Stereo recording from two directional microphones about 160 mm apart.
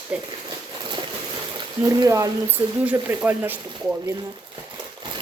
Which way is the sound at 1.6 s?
20° right (ahead or behind).